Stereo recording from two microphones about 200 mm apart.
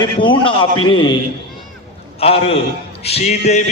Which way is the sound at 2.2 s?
30° left (ahead or behind).